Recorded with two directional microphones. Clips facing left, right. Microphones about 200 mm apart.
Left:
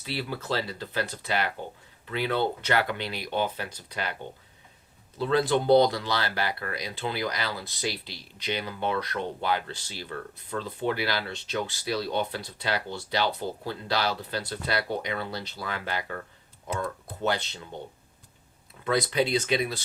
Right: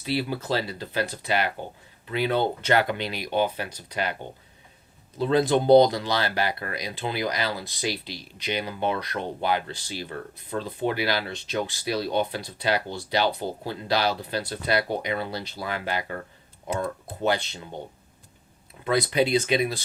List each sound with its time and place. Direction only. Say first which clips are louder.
0.0 s speech: right 6 dB; 15° right (ahead or behind)
17.2 s speech: right 3 dB; 15° right (ahead or behind)
18.9 s speech: right 3 dB; 15° right (ahead or behind)